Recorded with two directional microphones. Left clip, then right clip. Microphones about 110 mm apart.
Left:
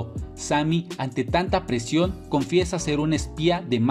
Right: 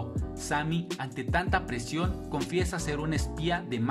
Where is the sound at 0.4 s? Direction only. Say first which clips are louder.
Left 8 dB; 35° left (ahead or behind).